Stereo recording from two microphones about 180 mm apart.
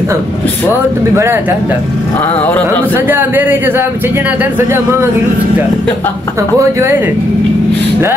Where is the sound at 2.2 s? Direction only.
10° left (ahead or behind).